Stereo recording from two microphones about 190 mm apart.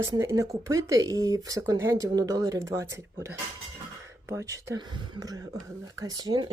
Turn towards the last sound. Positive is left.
turn(degrees=-20)  # may be behind; listen again after turning